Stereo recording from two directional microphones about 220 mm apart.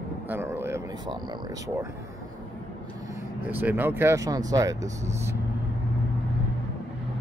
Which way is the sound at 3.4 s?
10° right (ahead or behind).